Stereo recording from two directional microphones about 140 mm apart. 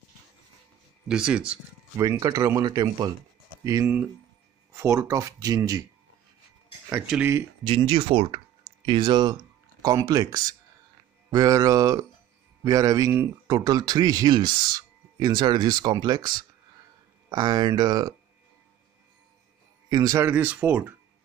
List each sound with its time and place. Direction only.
1.0 s speech: 5° right (ahead or behind)
2.0 s speech: 25° right (ahead or behind)
3.8 s speech: 10° right (ahead or behind)
4.7 s speech: 20° right (ahead or behind)
6.9 s speech: 10° right (ahead or behind)
7.6 s speech: 40° right (ahead or behind)
19.9 s speech: 25° right (ahead or behind)
20.2 s speech: 15° right (ahead or behind)